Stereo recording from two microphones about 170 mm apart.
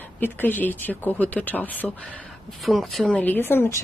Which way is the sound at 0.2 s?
10° left (ahead or behind).